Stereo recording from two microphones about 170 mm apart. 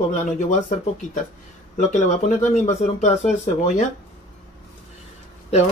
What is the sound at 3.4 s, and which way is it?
Speech, 40° left (ahead or behind).